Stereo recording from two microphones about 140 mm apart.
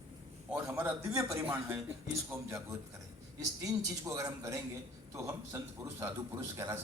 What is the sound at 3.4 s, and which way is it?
A man's voice, 25° right (ahead or behind).